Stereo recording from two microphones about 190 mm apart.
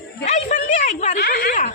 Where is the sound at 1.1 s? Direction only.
50° left (ahead or behind).